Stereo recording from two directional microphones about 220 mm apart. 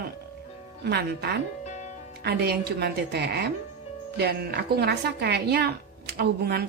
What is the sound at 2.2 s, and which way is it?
Speech, 45° right (ahead or behind).